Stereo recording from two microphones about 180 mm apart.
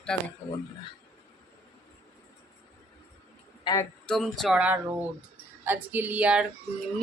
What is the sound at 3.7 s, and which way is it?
Speech, 25° left (ahead or behind).